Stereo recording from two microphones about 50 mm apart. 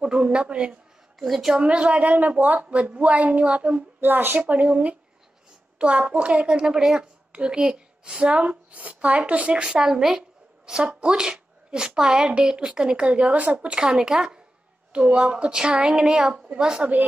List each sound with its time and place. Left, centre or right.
0.0 s a woman's voice: right
1.2 s a woman's voice: centre
1.6 s a woman's voice: centre
4.0 s a woman's voice: right; by 14.4 s centre
14.9 s a woman's voice: right